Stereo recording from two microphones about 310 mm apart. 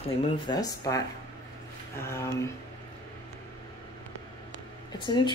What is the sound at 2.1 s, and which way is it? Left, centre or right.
Speech, centre.